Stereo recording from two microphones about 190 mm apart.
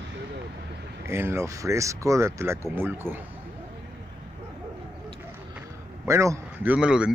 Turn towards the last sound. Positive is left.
turn(degrees=-5)  # may be behind; listen again after turning